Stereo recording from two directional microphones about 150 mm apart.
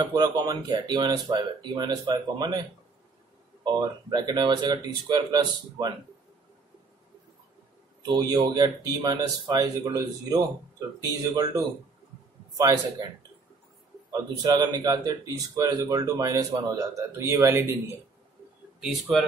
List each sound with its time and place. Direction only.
0.0 s speech: 25° right (ahead or behind)
3.6 s speech: 30° right (ahead or behind)
8.0 s speech: 25° right (ahead or behind)
14.1 s speech: 25° right (ahead or behind)